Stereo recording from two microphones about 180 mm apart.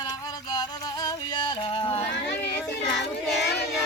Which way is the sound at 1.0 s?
25° left (ahead or behind).